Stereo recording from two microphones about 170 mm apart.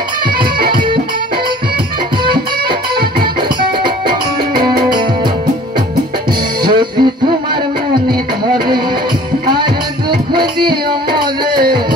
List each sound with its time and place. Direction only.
6.6 s music: 25° right (ahead or behind)
10.3 s music: 25° right (ahead or behind)